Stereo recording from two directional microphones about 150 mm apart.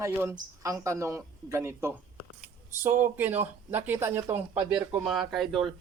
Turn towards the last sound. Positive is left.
turn(degrees=0)  # may be behind; listen again after turning